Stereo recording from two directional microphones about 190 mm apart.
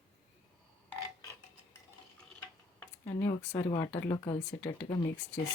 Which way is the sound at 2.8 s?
15° left (ahead or behind).